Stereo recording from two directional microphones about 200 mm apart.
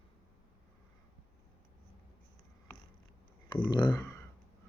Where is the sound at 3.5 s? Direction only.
20° left (ahead or behind).